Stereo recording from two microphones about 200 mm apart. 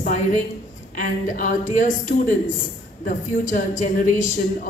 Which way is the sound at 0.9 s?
40° left (ahead or behind).